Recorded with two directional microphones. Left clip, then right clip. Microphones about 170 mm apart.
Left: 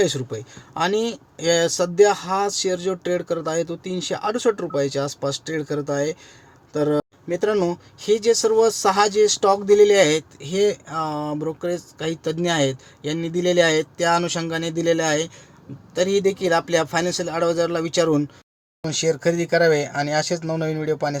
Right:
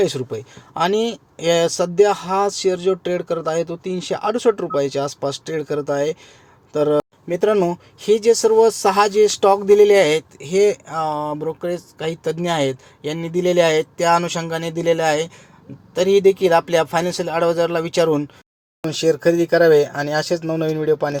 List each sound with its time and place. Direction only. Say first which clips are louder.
0.0 s speech: right 2 dB; 10° right (ahead or behind)